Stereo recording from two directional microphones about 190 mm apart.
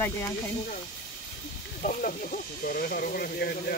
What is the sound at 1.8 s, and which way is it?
Speech, 45° left (ahead or behind).